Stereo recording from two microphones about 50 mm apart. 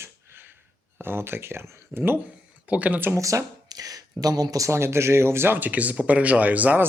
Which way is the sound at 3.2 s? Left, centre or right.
Right.